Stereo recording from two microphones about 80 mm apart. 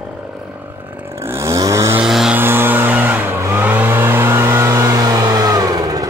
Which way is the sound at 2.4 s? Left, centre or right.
Right.